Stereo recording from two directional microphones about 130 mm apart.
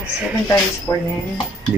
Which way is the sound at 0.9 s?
25° left (ahead or behind).